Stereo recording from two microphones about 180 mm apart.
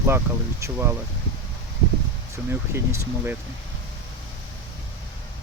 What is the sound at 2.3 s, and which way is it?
Speech, 15° right (ahead or behind).